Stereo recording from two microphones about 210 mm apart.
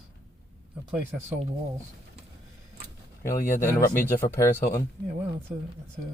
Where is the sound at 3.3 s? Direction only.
40° left (ahead or behind).